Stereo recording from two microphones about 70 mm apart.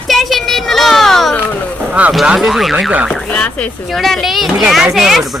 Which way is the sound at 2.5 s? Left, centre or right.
Centre.